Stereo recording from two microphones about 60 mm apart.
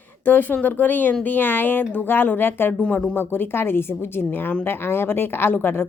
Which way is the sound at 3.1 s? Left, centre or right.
Left.